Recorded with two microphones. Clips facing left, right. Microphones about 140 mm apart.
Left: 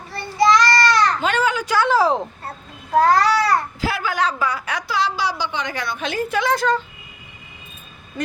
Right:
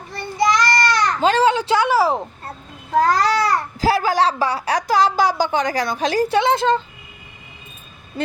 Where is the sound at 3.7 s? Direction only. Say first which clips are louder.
Right 6 dB; 35° right (ahead or behind).